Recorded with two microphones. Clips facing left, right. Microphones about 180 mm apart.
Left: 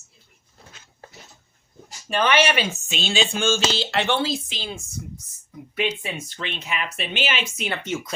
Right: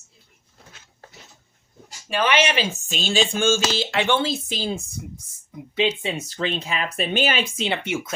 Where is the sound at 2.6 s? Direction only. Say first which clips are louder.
Right 1 dB; 35° right (ahead or behind).